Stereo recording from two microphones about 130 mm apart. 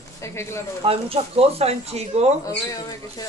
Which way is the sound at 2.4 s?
25° left (ahead or behind).